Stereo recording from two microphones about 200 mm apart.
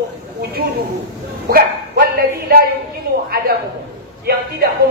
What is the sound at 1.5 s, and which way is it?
Speech, 50° right (ahead or behind).